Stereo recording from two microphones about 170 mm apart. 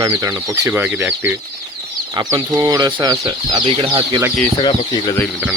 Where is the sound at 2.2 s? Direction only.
20° right (ahead or behind).